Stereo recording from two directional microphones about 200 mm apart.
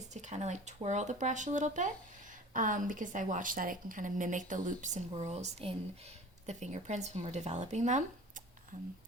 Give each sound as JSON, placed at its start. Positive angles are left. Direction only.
{"t": 0.1, "sound": "a woman's voice", "side_deg": -35}